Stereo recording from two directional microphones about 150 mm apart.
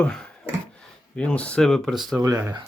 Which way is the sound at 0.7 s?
5° left (ahead or behind).